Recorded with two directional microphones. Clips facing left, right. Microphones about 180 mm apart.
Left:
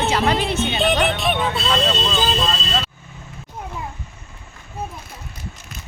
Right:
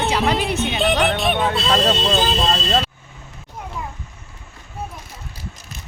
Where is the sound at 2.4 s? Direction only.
40° right (ahead or behind).